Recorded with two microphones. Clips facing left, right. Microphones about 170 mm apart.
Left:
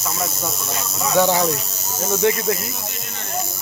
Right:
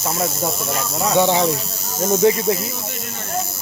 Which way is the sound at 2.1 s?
25° right (ahead or behind).